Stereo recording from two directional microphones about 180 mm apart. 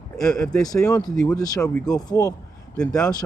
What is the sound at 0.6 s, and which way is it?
Speech, 20° left (ahead or behind).